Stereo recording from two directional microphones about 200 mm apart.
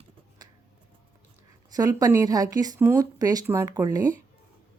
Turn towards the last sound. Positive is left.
turn(degrees=-20)  # may be behind; listen again after turning